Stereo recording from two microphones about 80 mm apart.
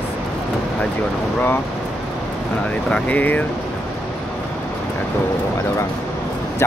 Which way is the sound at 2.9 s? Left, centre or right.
Left.